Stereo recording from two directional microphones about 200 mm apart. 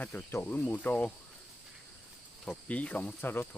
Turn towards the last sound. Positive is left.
turn(degrees=10)  # may be behind; listen again after turning